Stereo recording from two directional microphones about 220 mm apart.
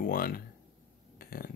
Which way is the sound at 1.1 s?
40° left (ahead or behind).